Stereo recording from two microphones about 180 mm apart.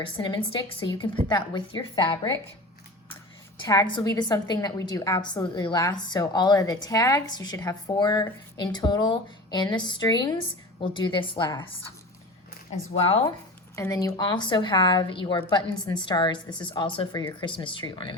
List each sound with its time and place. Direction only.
0.0 s a woman's voice: 25° left (ahead or behind)
3.6 s a woman's voice: 25° left (ahead or behind)
13.0 s speech: 30° left (ahead or behind)
13.7 s a woman's voice: 20° left (ahead or behind)